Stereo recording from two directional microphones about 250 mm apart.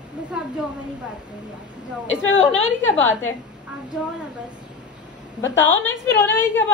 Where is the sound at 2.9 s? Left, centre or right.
Centre.